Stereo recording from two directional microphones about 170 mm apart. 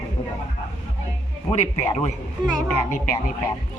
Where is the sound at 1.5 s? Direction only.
40° left (ahead or behind).